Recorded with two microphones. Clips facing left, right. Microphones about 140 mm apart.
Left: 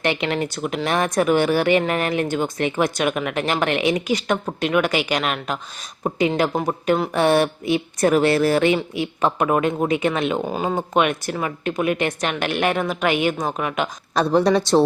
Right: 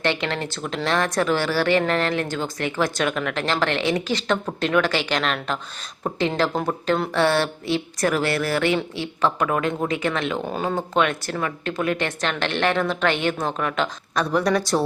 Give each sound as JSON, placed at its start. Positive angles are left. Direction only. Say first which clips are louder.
{"t": 0.0, "sound": "speech", "louder": "left 2 dB", "side_deg": 15}
{"t": 14.2, "sound": "speech", "louder": "left 4 dB", "side_deg": 30}